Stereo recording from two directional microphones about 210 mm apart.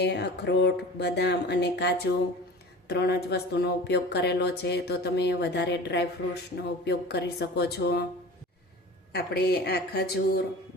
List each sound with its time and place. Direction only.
0.0 s speech: 50° left (ahead or behind)
9.1 s speech: 50° left (ahead or behind)